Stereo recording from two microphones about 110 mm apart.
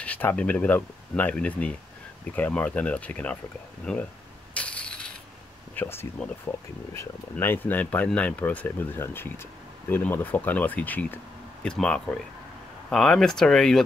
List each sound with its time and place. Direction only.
0.0 s speech: 15° left (ahead or behind)
4.6 s ratchet: 10° left (ahead or behind)
5.8 s speech: 20° left (ahead or behind); by 13.8 s 5° left (ahead or behind)